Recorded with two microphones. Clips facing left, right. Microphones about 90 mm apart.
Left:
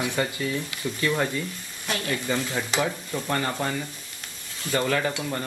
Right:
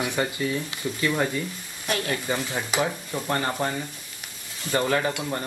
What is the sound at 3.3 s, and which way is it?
Speech, 30° right (ahead or behind).